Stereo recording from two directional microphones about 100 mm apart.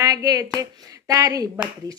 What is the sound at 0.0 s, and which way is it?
Hands, 35° right (ahead or behind).